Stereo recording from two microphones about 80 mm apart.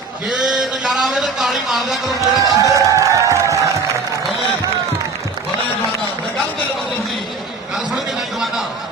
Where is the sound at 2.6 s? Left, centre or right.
Right.